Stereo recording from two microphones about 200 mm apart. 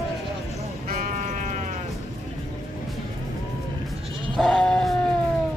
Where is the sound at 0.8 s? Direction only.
40° right (ahead or behind).